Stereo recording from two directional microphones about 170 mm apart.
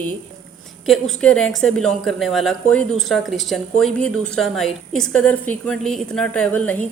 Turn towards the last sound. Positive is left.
turn(degrees=10)  # may be behind; listen again after turning